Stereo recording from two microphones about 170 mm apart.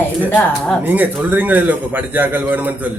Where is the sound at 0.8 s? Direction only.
10° right (ahead or behind).